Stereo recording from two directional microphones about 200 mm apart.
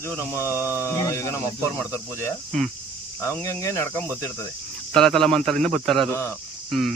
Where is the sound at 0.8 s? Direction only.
15° left (ahead or behind).